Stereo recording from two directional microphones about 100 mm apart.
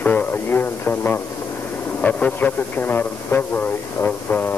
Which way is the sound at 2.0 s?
15° left (ahead or behind).